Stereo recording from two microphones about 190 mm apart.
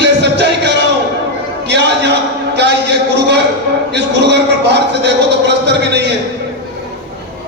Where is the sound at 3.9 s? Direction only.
65° right (ahead or behind).